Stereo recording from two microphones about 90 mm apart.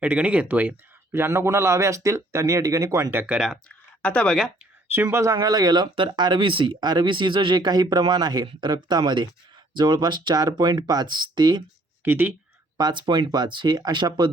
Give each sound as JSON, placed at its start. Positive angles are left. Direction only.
{"t": 0.0, "sound": "speech", "side_deg": -15}
{"t": 1.1, "sound": "speech", "side_deg": -30}
{"t": 3.3, "sound": "speech", "side_deg": -5}
{"t": 3.7, "sound": "a sound", "side_deg": 10}
{"t": 5.1, "sound": "speech", "side_deg": -35}
{"t": 12.0, "sound": "speech", "side_deg": -20}
{"t": 12.7, "sound": "speech", "side_deg": -55}